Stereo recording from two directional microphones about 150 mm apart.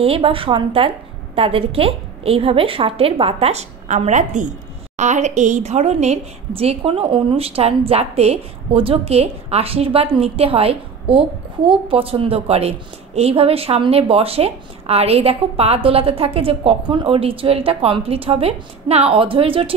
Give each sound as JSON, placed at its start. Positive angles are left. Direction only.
{"t": 0.0, "sound": "a woman's voice", "side_deg": -40}